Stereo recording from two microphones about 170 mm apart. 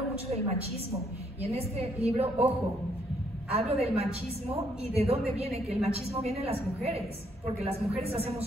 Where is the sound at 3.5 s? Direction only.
35° right (ahead or behind).